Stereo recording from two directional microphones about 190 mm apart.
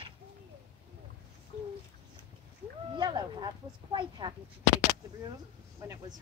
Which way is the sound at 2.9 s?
25° right (ahead or behind).